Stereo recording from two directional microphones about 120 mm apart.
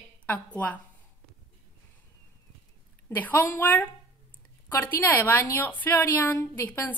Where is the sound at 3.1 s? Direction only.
15° left (ahead or behind).